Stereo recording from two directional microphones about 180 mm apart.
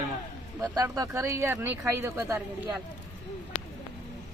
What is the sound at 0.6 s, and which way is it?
Speech, 20° right (ahead or behind).